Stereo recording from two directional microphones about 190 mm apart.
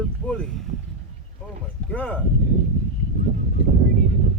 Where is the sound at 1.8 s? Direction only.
5° left (ahead or behind).